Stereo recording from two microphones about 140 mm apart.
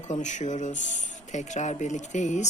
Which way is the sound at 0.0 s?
60° left (ahead or behind).